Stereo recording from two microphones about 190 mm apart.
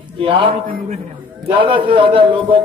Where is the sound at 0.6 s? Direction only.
50° right (ahead or behind).